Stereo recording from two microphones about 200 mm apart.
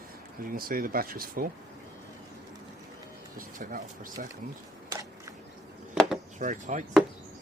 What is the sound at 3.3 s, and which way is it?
Speech, 40° right (ahead or behind).